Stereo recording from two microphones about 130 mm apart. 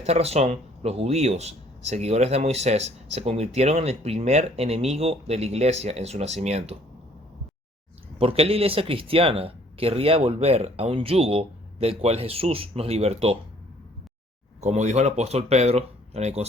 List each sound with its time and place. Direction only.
0.0 s speech: 55° right (ahead or behind)
8.2 s speech: 50° right (ahead or behind)
14.6 s speech: 60° right (ahead or behind)